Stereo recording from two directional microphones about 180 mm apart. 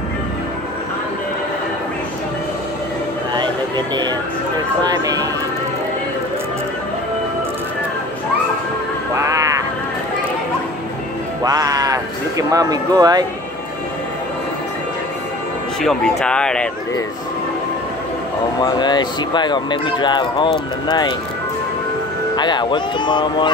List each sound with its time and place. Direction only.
3.3 s a sound: 25° right (ahead or behind)
4.8 s speech: 20° right (ahead or behind)
9.1 s music: 15° right (ahead or behind)
11.4 s music: 20° right (ahead or behind)
15.8 s speech: centre (ahead or behind)
18.6 s speech: 25° left (ahead or behind)
22.3 s speech: 25° left (ahead or behind)